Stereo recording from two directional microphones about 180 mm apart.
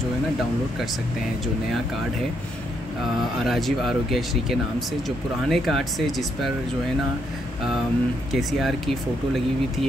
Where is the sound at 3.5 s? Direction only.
Centre (ahead or behind).